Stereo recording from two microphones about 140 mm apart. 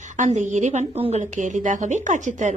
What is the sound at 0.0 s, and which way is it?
A woman's voice, 60° right (ahead or behind).